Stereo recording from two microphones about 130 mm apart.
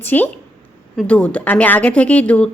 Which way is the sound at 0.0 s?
15° left (ahead or behind).